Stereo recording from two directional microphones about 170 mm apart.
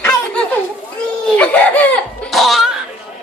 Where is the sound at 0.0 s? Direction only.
10° left (ahead or behind).